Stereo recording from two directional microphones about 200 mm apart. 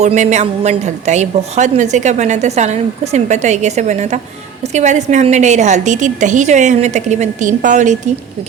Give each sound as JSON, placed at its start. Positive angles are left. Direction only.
{"t": 0.0, "sound": "a woman's voice", "side_deg": -35}